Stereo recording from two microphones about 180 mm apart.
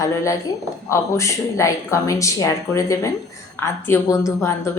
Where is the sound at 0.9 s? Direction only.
15° left (ahead or behind).